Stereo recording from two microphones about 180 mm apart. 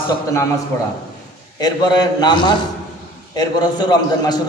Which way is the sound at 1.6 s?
20° left (ahead or behind).